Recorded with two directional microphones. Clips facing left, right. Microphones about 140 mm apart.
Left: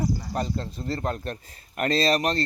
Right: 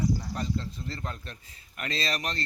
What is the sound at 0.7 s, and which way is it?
Speech, 35° left (ahead or behind).